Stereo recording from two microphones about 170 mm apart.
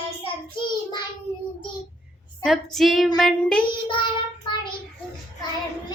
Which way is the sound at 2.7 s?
Centre (ahead or behind).